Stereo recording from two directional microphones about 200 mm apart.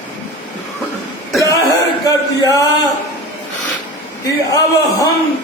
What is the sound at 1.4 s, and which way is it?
Cough, 15° left (ahead or behind).